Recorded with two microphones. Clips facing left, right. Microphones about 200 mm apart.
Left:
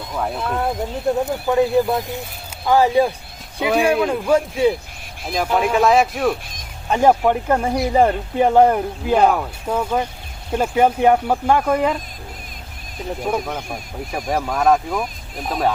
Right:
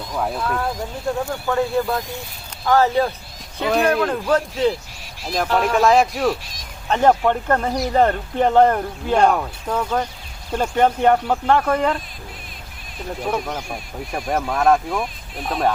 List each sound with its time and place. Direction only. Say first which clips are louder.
0.1 s speech: even; centre (ahead or behind)
0.3 s speech: left 2 dB; 25° left (ahead or behind); by 11.9 s 10° left (ahead or behind)
13.2 s speech: left 1 dB; 5° left (ahead or behind)